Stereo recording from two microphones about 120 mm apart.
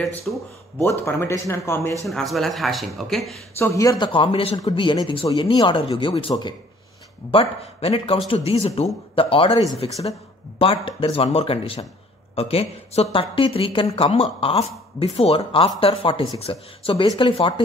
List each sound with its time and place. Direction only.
0.3 s speech: 10° left (ahead or behind)
0.8 s speech: 25° left (ahead or behind)
2.0 s speech: centre (ahead or behind)
3.5 s speech: 25° left (ahead or behind)
4.0 s speech: 45° left (ahead or behind)